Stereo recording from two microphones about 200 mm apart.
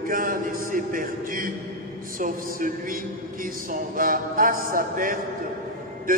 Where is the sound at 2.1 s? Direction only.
40° right (ahead or behind).